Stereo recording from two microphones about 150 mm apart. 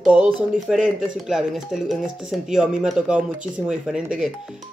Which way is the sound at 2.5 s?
5° right (ahead or behind).